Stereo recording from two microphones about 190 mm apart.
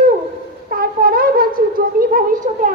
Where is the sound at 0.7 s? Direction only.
50° right (ahead or behind).